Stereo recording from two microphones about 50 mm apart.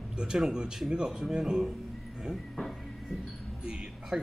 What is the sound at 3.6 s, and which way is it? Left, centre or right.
Music, centre.